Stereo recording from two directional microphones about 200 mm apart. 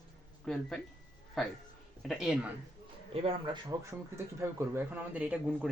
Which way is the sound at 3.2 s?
30° right (ahead or behind).